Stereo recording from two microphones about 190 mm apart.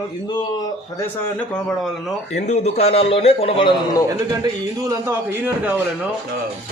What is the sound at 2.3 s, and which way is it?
A man's voice, 35° left (ahead or behind).